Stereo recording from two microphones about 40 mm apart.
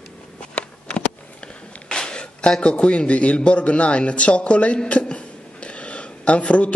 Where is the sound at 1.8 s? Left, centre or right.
Left.